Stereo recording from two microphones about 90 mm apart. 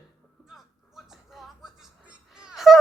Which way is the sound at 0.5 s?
Centre (ahead or behind).